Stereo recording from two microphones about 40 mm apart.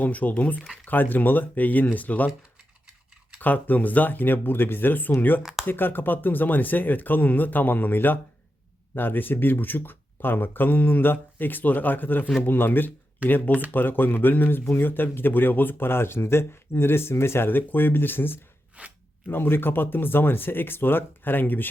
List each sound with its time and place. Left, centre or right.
0.0 s speech: left
3.4 s speech: left
5.4 s speech: centre
5.6 s speech: left
13.2 s speech: left
14.6 s speech: left
18.8 s speech: right
19.3 s speech: left